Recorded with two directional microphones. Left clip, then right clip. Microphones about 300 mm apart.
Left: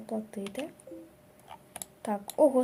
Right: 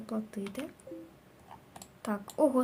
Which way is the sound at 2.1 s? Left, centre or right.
Right.